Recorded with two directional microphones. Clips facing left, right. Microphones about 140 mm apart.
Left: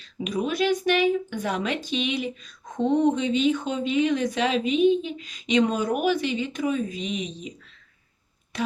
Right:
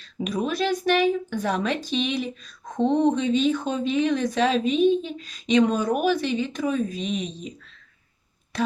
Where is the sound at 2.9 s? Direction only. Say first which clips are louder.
Even; 30° right (ahead or behind).